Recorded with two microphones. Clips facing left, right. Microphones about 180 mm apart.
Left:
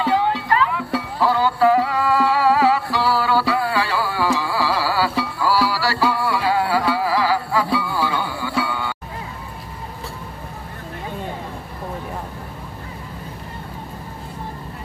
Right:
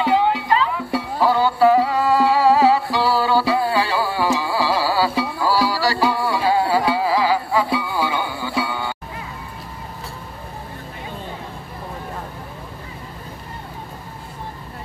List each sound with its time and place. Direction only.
0.0 s music: 15° right (ahead or behind)